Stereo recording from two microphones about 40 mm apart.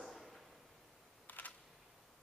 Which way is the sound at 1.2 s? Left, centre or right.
Left.